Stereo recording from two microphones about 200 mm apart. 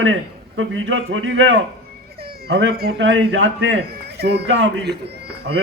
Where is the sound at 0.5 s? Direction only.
75° right (ahead or behind).